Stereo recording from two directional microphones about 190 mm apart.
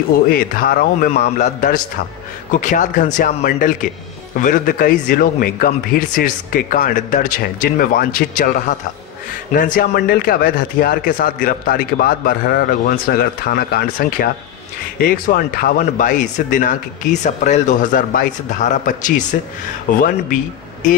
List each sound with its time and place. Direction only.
0.3 s speech: 50° left (ahead or behind)
1.4 s a man's voice: 40° left (ahead or behind)